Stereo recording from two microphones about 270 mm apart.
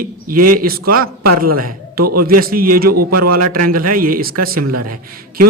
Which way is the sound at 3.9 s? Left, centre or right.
Right.